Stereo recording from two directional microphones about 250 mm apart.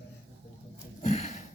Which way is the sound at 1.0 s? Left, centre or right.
Left.